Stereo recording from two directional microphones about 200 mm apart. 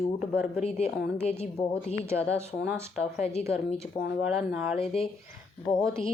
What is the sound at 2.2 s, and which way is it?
Speech, 10° right (ahead or behind).